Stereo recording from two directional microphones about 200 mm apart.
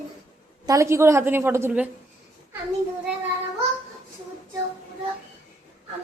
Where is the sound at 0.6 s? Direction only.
15° right (ahead or behind).